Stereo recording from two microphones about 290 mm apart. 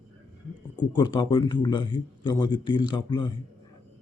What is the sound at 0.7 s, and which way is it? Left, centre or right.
A man's voice, centre.